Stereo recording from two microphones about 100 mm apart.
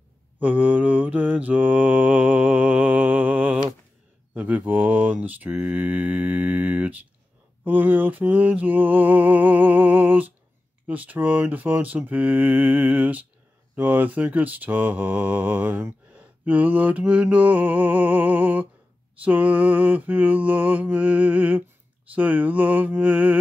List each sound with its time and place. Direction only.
0.4 s mantra: 15° right (ahead or behind)
4.3 s speech: 15° right (ahead or behind)